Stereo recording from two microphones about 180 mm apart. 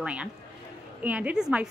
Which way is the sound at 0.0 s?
5° right (ahead or behind).